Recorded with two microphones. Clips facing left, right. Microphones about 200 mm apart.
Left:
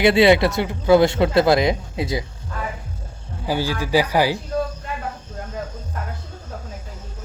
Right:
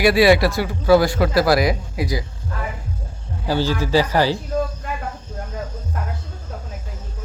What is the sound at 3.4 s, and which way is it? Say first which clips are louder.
Speech: right 2 dB; 10° left (ahead or behind).